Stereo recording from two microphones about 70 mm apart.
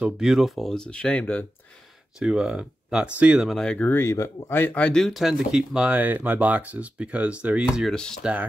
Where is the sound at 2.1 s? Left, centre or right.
Centre.